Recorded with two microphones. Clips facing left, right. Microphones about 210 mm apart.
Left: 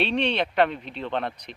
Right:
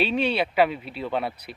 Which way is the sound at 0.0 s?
5° right (ahead or behind).